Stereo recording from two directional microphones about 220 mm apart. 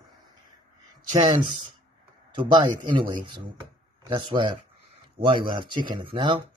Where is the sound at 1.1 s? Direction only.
20° right (ahead or behind).